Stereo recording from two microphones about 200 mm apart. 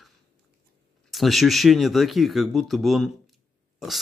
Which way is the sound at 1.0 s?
Centre (ahead or behind).